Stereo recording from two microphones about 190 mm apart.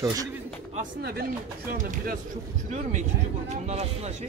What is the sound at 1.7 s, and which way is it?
Speech, 45° right (ahead or behind).